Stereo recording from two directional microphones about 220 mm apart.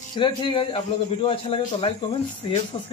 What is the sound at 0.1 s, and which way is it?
A man's voice, 20° left (ahead or behind).